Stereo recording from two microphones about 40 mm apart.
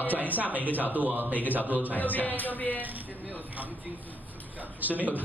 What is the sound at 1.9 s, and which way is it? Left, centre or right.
Speech, left.